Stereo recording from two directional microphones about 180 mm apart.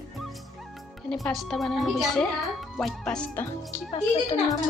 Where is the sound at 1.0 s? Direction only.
Centre (ahead or behind).